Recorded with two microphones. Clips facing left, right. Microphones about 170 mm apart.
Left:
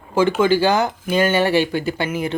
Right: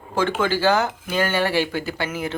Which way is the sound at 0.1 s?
10° left (ahead or behind).